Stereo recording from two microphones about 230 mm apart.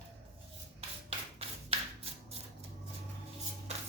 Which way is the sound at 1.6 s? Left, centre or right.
Right.